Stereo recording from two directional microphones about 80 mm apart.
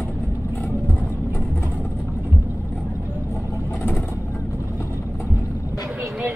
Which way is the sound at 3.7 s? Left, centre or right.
Left.